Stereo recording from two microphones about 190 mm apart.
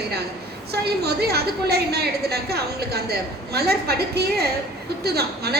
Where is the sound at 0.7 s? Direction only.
55° right (ahead or behind).